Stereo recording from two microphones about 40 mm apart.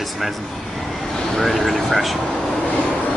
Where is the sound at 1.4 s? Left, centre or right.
Centre.